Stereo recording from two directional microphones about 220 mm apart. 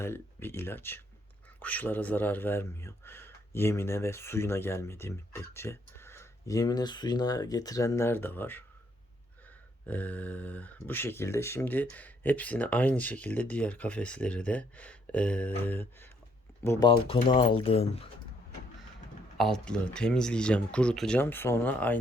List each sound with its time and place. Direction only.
0.0 s speech: 10° left (ahead or behind)
9.8 s speech: 5° left (ahead or behind)
16.6 s speech: 20° left (ahead or behind)
19.4 s speech: centre (ahead or behind)